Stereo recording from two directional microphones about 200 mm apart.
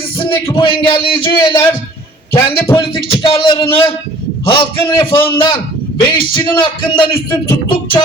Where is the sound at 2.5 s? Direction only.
20° left (ahead or behind).